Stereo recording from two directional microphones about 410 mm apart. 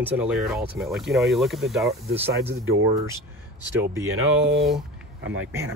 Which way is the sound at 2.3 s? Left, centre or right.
Right.